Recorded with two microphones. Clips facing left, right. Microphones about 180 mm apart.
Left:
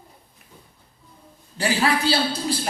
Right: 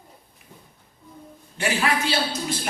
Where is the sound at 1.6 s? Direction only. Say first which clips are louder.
Left 2 dB; 35° left (ahead or behind).